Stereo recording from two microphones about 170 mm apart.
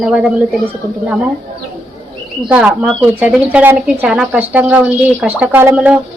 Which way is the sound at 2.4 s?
5° right (ahead or behind).